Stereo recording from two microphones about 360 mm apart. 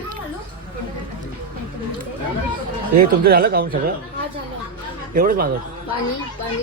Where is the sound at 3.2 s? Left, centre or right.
Right.